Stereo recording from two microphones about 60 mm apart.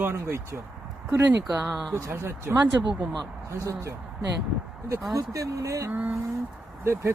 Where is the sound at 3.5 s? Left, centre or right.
Right.